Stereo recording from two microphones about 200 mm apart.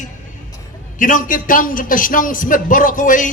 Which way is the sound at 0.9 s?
40° left (ahead or behind).